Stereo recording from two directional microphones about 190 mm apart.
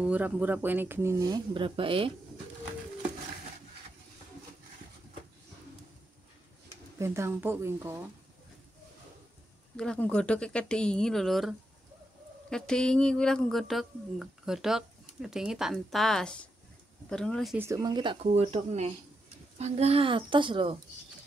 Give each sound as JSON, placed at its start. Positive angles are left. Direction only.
{"t": 0.0, "sound": "speech", "side_deg": -10}
{"t": 7.0, "sound": "speech", "side_deg": -15}
{"t": 9.8, "sound": "speech", "side_deg": 5}
{"t": 17.6, "sound": "speech", "side_deg": -15}